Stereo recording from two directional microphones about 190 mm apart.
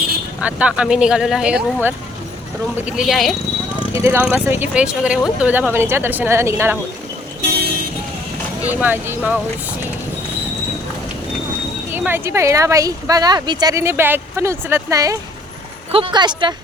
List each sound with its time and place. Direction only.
0.4 s speech: 5° right (ahead or behind)
3.9 s speech: 15° right (ahead or behind)
8.6 s speech: 10° right (ahead or behind)
11.9 s speech: 10° right (ahead or behind)
15.9 s speech: 30° right (ahead or behind)